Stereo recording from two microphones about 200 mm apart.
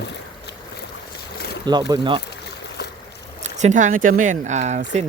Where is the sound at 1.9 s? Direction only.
25° right (ahead or behind).